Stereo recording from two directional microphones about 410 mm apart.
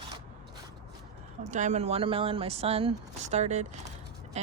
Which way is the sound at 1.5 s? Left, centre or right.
Centre.